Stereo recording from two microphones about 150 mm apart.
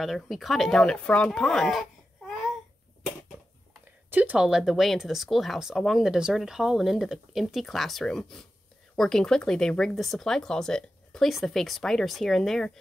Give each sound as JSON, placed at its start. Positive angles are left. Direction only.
{"t": 0.0, "sound": "speech", "side_deg": 0}
{"t": 4.1, "sound": "speech", "side_deg": -10}